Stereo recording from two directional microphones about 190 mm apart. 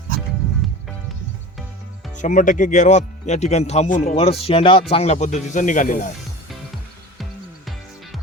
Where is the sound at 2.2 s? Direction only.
40° left (ahead or behind).